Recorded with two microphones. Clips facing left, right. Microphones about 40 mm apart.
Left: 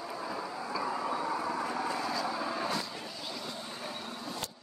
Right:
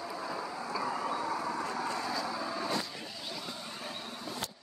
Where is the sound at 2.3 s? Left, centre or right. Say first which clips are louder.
Left 2 dB; centre.